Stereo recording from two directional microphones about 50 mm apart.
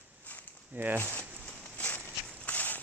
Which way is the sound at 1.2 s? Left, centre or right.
Right.